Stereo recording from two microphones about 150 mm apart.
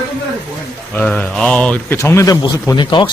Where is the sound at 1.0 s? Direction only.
5° left (ahead or behind).